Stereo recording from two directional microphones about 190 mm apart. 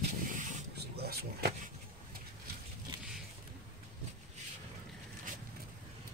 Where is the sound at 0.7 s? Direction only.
55° right (ahead or behind).